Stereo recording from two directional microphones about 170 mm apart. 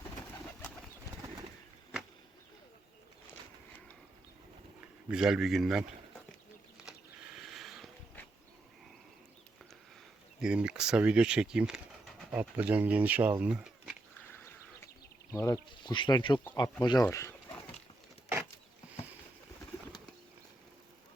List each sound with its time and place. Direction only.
5.0 s speech: 5° right (ahead or behind)
7.3 s mechanisms: centre (ahead or behind)
10.4 s speech: 5° right (ahead or behind)
13.4 s a sound: 5° right (ahead or behind)
14.3 s a sound: 15° left (ahead or behind)
15.3 s speech: 15° left (ahead or behind)
15.7 s speech: 30° left (ahead or behind)